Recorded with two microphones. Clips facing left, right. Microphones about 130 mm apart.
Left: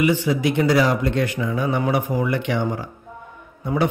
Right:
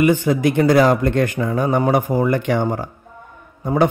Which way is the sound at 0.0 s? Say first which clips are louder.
Right 4 dB; 50° right (ahead or behind).